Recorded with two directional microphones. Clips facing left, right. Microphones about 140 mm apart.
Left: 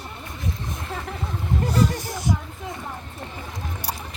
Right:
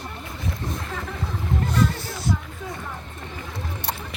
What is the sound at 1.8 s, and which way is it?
Music, 15° left (ahead or behind).